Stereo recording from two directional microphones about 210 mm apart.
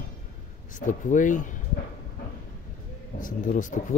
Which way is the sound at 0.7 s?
40° left (ahead or behind).